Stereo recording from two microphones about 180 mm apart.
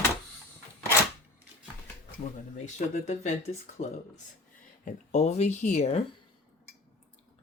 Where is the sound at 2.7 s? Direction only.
40° left (ahead or behind).